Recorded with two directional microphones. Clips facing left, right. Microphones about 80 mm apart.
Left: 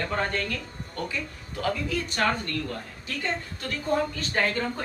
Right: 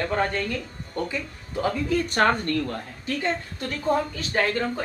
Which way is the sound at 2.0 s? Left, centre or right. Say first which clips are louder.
Right 4 dB; right.